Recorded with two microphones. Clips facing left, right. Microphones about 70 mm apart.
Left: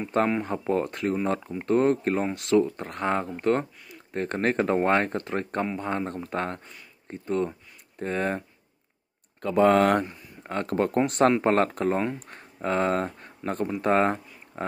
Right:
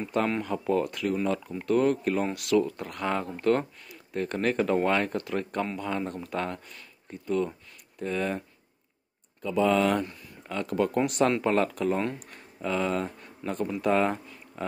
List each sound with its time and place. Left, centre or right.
0.4 s speech: left
9.4 s speech: left